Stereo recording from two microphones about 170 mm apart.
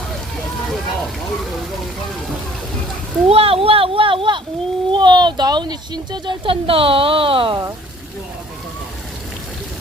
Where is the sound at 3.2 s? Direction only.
35° right (ahead or behind).